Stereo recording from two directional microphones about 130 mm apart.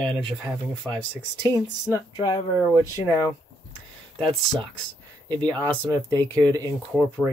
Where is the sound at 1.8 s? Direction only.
25° left (ahead or behind).